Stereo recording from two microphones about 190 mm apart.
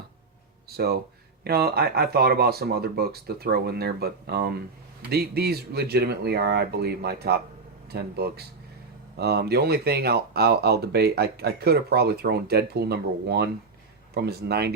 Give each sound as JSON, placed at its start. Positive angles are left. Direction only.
{"t": 0.8, "sound": "speech", "side_deg": -55}